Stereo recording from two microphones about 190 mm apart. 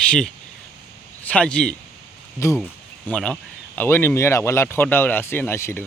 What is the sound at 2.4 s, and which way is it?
Speech, 15° left (ahead or behind).